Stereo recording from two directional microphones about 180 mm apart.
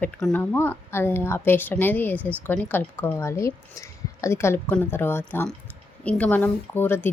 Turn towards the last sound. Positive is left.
turn(degrees=10)  # may be behind; listen again after turning